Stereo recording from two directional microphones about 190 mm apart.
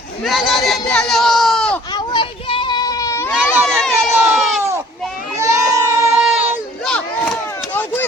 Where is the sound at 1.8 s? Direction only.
20° left (ahead or behind).